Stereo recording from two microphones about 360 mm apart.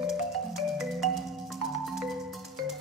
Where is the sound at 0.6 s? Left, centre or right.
Centre.